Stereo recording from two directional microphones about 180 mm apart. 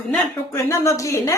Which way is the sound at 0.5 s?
15° left (ahead or behind).